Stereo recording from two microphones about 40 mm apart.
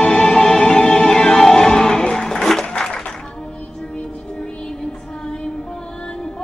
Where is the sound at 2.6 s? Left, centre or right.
Left.